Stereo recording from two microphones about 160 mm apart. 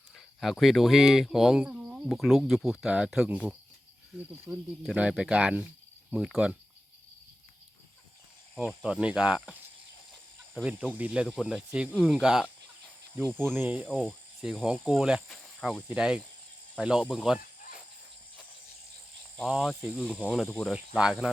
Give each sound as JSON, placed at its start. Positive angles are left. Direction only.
{"t": 0.3, "sound": "speech", "side_deg": 0}
{"t": 4.5, "sound": "speech", "side_deg": -25}
{"t": 4.9, "sound": "speech", "side_deg": -5}
{"t": 8.5, "sound": "speech", "side_deg": -5}
{"t": 13.6, "sound": "speech", "side_deg": -10}
{"t": 19.4, "sound": "speech", "side_deg": 0}